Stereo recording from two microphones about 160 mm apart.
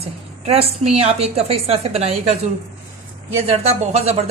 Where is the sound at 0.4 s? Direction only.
40° right (ahead or behind).